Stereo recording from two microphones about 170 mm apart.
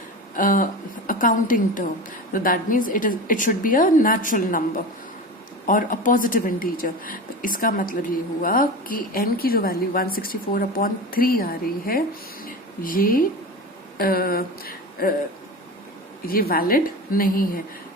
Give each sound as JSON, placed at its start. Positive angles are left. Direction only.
{"t": 0.3, "sound": "speech", "side_deg": 50}
{"t": 5.6, "sound": "a woman's voice", "side_deg": 50}
{"t": 12.5, "sound": "a sound", "side_deg": 55}
{"t": 14.0, "sound": "a woman's voice", "side_deg": 60}
{"t": 16.2, "sound": "a woman's voice", "side_deg": 60}